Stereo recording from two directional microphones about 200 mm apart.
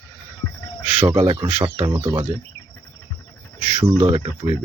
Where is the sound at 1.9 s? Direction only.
15° right (ahead or behind).